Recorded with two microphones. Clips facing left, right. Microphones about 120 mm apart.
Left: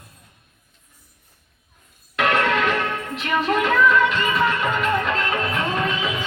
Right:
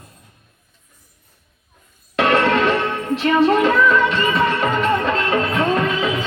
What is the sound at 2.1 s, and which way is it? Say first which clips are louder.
Music: right 4 dB; 30° right (ahead or behind).